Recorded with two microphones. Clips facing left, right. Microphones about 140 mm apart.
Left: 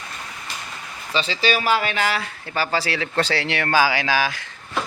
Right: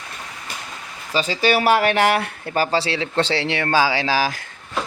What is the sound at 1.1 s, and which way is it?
Speech, 45° right (ahead or behind).